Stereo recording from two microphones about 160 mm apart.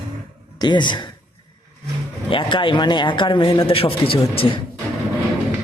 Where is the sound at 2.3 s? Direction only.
30° left (ahead or behind).